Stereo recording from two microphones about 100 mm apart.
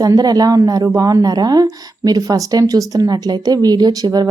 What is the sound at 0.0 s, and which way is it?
Speech, 40° right (ahead or behind).